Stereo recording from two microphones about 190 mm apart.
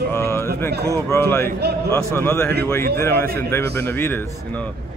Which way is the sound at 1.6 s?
60° right (ahead or behind).